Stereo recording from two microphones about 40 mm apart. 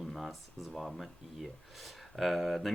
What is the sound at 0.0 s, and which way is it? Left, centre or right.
Speech, centre.